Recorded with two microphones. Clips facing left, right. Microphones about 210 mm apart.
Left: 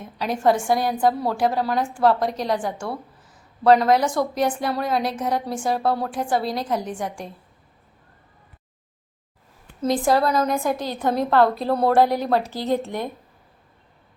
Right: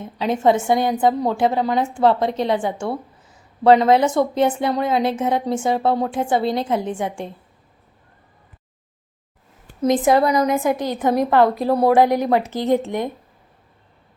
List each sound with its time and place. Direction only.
0.4 s a woman's voice: 20° right (ahead or behind)
9.8 s a woman's voice: 20° right (ahead or behind)